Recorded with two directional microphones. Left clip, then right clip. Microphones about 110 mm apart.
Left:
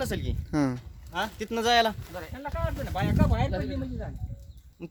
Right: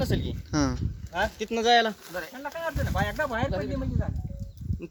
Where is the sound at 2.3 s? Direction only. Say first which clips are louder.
Even; 45° right (ahead or behind).